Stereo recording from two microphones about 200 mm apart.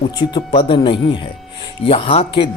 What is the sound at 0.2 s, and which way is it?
Speech, 20° left (ahead or behind).